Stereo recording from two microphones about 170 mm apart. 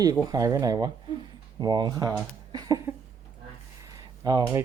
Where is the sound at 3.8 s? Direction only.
20° right (ahead or behind).